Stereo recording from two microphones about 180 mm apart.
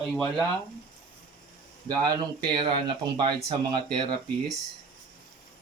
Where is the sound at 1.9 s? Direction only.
20° right (ahead or behind).